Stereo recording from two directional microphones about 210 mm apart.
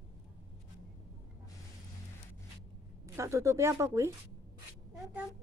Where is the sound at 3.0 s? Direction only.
15° right (ahead or behind).